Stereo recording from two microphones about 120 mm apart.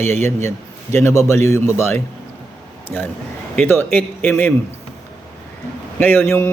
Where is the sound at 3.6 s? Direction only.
15° left (ahead or behind).